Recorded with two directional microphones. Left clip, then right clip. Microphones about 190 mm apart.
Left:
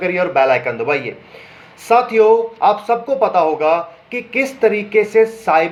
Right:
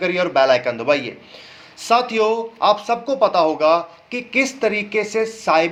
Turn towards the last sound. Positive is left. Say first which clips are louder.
# left 4 dB
turn(degrees=-25)  # may be behind; listen again after turning